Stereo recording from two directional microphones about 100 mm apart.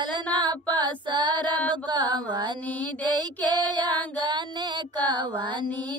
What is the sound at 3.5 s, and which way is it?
Child singing, 50° right (ahead or behind).